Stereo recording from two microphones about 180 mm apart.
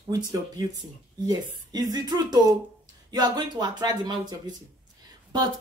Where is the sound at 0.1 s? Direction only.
20° right (ahead or behind).